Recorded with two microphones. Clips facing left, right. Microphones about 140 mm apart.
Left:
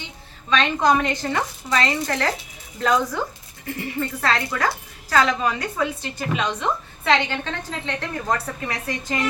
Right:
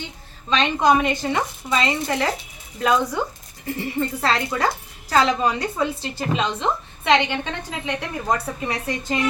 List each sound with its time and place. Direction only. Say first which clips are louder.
0.5 s speech: right 1 dB; 15° right (ahead or behind)
3.8 s a woman's voice: right 2 dB; 25° right (ahead or behind)